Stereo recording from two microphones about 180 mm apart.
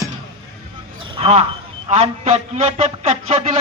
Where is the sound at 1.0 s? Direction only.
30° right (ahead or behind).